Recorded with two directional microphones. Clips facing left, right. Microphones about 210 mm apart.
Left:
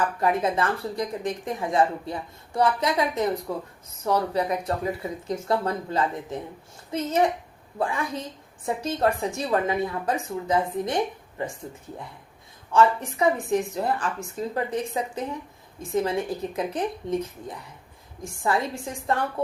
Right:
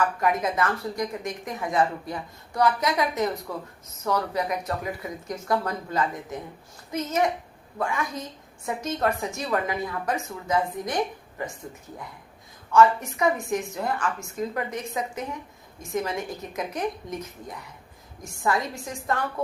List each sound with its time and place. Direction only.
0.2 s a woman's voice: 30° left (ahead or behind)
12.7 s a woman's voice: 30° left (ahead or behind)